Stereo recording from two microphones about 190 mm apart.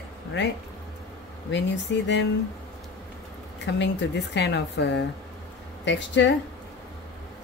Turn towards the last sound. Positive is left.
turn(degrees=70)  # may be behind; listen again after turning